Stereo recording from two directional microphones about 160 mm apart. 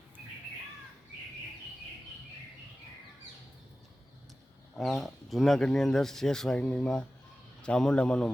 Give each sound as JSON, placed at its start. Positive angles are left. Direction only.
{"t": 4.7, "sound": "speech", "side_deg": 5}